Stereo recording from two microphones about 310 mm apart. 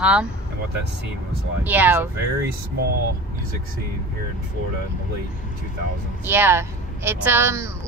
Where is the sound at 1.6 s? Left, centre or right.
Centre.